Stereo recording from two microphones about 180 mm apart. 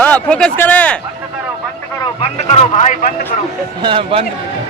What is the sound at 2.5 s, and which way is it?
Speech, 40° left (ahead or behind).